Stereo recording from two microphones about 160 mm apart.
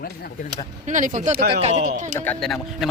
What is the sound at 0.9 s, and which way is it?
Speech, 50° right (ahead or behind).